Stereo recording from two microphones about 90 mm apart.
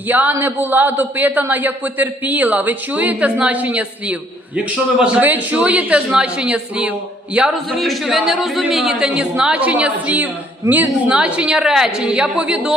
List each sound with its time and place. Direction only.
0.1 s a man's voice: 20° right (ahead or behind)